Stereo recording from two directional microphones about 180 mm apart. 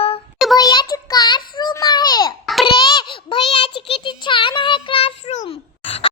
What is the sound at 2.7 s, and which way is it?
Child singing, 25° left (ahead or behind).